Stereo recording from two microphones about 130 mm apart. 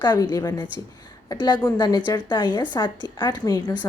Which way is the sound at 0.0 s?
30° left (ahead or behind).